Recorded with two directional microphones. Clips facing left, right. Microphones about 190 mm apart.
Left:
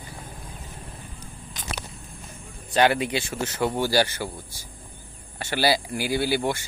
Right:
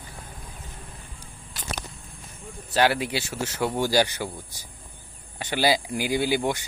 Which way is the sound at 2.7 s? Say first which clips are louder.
Left 2 dB; 5° right (ahead or behind).